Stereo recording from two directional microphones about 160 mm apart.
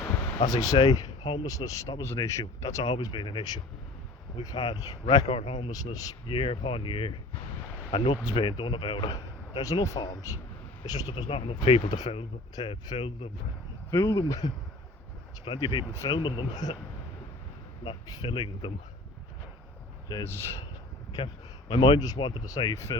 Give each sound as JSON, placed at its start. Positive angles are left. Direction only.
{"t": 0.4, "sound": "speech", "side_deg": 20}
{"t": 6.2, "sound": "speech", "side_deg": 35}
{"t": 11.1, "sound": "speech", "side_deg": 35}
{"t": 13.9, "sound": "speech", "side_deg": 15}
{"t": 18.1, "sound": "speech", "side_deg": 30}
{"t": 20.2, "sound": "speech", "side_deg": 15}
{"t": 21.7, "sound": "speech", "side_deg": 30}